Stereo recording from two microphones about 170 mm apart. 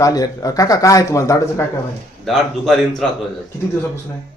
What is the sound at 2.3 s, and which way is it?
Speech, centre (ahead or behind).